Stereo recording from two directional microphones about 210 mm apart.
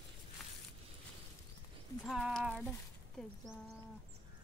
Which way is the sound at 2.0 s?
Centre (ahead or behind).